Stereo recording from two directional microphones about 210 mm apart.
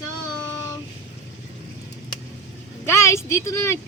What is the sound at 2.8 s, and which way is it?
Speech, 15° left (ahead or behind).